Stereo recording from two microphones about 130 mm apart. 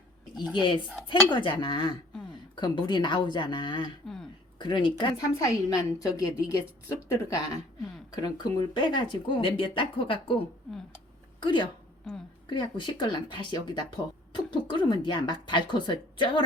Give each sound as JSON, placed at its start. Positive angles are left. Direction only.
{"t": 0.5, "sound": "speech", "side_deg": 35}
{"t": 4.0, "sound": "speech", "side_deg": 5}
{"t": 4.5, "sound": "speech", "side_deg": 40}
{"t": 4.9, "sound": "a woman's voice", "side_deg": 30}